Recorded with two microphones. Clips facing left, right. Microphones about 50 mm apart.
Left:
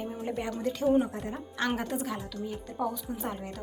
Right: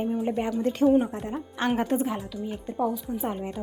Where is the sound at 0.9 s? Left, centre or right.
Centre.